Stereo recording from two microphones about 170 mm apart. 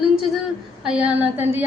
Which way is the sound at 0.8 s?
5° right (ahead or behind).